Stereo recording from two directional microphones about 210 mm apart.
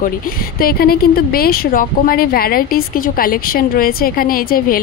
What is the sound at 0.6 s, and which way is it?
Speech, 45° left (ahead or behind).